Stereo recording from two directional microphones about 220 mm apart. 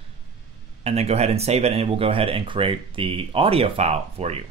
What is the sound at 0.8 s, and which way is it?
Speech, 30° right (ahead or behind).